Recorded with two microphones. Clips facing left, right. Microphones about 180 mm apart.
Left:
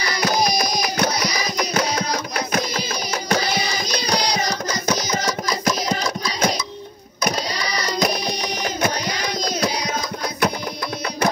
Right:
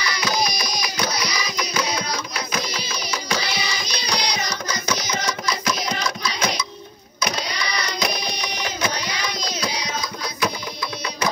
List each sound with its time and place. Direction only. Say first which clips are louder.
0.0 s music: left 3 dB; 45° left (ahead or behind)